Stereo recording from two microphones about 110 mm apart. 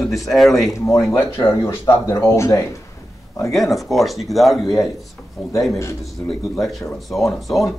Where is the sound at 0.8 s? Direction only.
30° left (ahead or behind).